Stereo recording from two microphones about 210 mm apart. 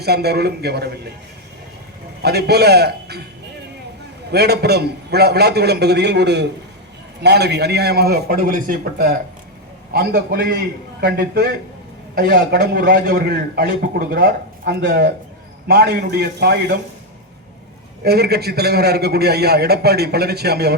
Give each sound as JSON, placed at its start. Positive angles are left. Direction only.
{"t": 0.0, "sound": "a man's voice", "side_deg": -50}
{"t": 2.2, "sound": "a man's voice", "side_deg": -50}
{"t": 4.3, "sound": "a man's voice", "side_deg": -50}
{"t": 18.0, "sound": "a man's voice", "side_deg": -50}